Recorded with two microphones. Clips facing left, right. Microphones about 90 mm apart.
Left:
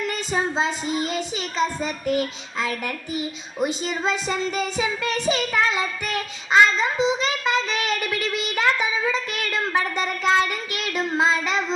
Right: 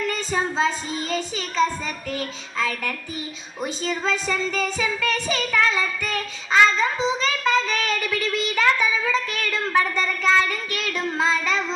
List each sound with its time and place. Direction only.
0.1 s a sound: 20° left (ahead or behind)
2.0 s child singing: 20° left (ahead or behind)
3.6 s speech: 20° left (ahead or behind)